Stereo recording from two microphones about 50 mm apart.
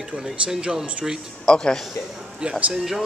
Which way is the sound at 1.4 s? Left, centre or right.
Centre.